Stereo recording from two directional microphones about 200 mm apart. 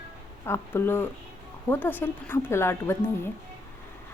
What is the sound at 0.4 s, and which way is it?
Speech, 10° left (ahead or behind).